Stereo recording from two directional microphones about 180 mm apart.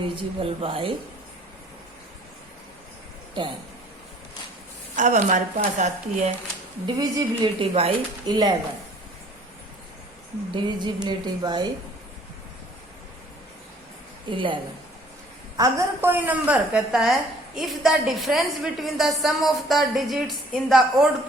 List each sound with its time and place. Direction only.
0.0 s speech: 30° right (ahead or behind)
4.9 s speech: 45° right (ahead or behind)
6.8 s speech: 20° right (ahead or behind)
10.5 s speech: 25° right (ahead or behind)
14.3 s speech: 25° right (ahead or behind)
15.5 s a woman's voice: 15° right (ahead or behind)